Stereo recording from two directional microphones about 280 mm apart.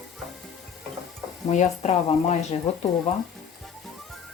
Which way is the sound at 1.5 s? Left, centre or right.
Left.